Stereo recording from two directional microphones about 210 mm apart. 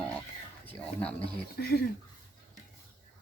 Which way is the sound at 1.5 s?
50° left (ahead or behind).